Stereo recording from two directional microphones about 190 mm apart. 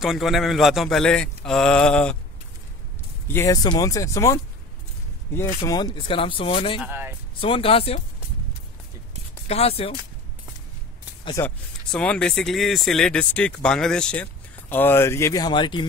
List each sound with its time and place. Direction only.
0.0 s a man's voice: centre (ahead or behind)
3.3 s speech: 15° left (ahead or behind)
5.7 s speech: 20° left (ahead or behind)
6.8 s speech: 10° right (ahead or behind)
7.3 s speech: 30° left (ahead or behind)
9.5 s speech: 30° left (ahead or behind)
11.4 s speech: 5° left (ahead or behind); by 15.9 s 25° left (ahead or behind)